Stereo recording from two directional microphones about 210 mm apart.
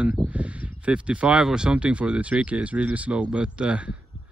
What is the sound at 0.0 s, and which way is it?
Speech, 5° right (ahead or behind).